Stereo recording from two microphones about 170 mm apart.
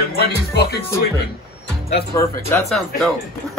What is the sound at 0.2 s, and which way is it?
Speech, 70° left (ahead or behind).